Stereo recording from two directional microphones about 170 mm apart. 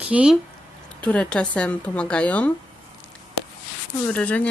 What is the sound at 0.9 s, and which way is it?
A woman's voice, 5° left (ahead or behind).